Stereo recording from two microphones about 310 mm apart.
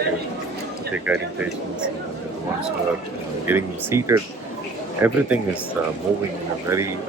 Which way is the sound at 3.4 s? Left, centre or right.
Centre.